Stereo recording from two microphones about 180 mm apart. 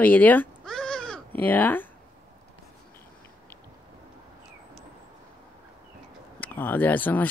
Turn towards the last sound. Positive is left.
turn(degrees=10)  # may be behind; listen again after turning